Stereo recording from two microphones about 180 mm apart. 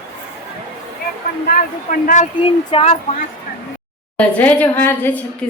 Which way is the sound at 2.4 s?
35° left (ahead or behind).